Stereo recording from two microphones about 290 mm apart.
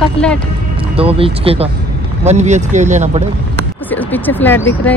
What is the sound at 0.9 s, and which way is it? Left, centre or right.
Speech, centre.